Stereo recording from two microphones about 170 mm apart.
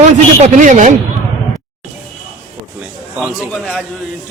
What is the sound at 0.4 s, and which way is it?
Speech, 45° right (ahead or behind).